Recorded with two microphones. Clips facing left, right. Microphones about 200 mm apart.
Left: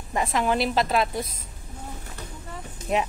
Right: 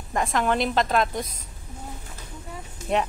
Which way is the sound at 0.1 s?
Centre (ahead or behind).